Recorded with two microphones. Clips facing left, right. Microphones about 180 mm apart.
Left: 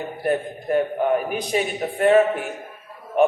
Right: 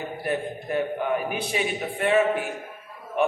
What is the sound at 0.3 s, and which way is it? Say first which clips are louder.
A man's voice: left 6 dB; 40° left (ahead or behind).